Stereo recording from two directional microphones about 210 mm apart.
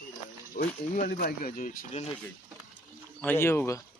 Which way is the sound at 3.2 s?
10° left (ahead or behind).